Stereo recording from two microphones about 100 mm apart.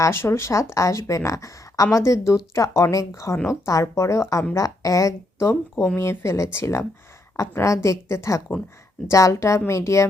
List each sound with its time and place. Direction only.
0.0 s speech: 25° left (ahead or behind)